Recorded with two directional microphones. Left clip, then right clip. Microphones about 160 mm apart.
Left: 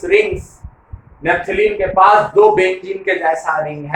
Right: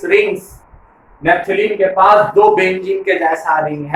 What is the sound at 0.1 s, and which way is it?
Speech, centre (ahead or behind).